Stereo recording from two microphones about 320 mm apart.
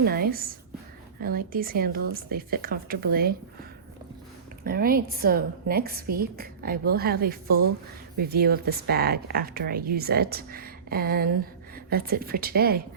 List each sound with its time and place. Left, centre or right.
0.0 s a woman's voice: right